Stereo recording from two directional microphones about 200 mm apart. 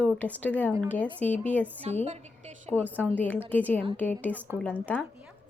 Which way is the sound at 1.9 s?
30° right (ahead or behind).